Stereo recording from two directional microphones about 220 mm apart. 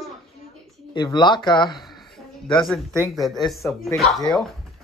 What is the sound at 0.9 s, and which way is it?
Speech, 20° left (ahead or behind).